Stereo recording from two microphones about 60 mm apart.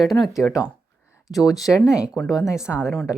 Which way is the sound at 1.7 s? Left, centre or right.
Left.